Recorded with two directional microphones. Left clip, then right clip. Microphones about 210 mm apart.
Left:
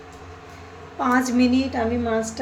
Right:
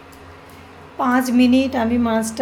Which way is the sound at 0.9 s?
20° right (ahead or behind).